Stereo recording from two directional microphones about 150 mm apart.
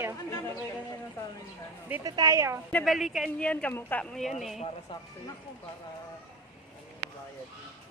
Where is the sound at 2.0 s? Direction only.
25° right (ahead or behind).